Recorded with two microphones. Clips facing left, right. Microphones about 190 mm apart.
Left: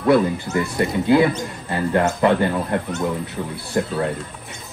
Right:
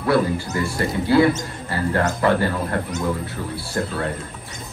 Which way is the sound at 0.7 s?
20° left (ahead or behind).